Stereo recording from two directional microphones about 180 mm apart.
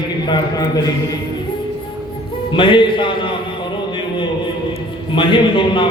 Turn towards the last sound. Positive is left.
turn(degrees=30)  # may be behind; listen again after turning